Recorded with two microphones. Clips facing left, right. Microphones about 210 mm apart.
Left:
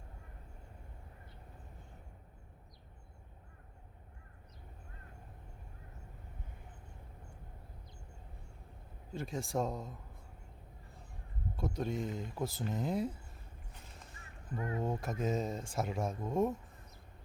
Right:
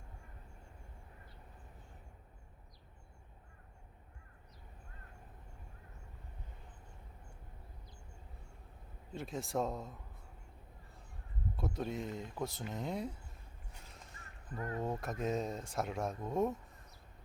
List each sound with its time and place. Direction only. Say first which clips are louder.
9.1 s speech: left 1 dB; centre (ahead or behind)
11.5 s speech: left 2 dB; centre (ahead or behind)
14.5 s speech: left 2 dB; 15° left (ahead or behind)
14.8 s speech: left 1 dB; centre (ahead or behind)